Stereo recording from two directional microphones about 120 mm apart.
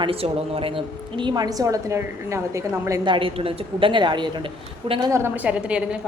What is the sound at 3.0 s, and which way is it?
A woman's voice, 45° right (ahead or behind).